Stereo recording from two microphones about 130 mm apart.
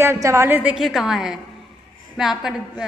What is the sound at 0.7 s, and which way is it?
A woman's voice, centre (ahead or behind).